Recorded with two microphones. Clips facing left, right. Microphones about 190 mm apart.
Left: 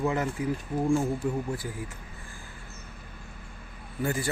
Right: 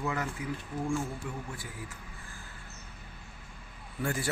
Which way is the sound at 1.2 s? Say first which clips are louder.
Left 10 dB; 40° left (ahead or behind).